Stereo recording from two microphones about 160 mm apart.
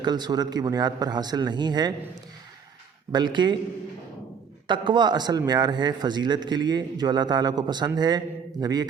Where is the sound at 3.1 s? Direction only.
30° right (ahead or behind).